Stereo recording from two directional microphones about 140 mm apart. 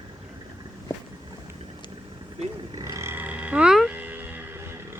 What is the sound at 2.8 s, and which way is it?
Roaring cats, 20° right (ahead or behind).